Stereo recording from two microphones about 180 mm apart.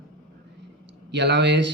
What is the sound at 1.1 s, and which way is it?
Speech, 75° right (ahead or behind).